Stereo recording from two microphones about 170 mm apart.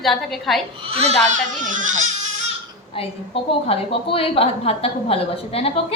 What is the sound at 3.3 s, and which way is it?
A woman's voice, 35° left (ahead or behind).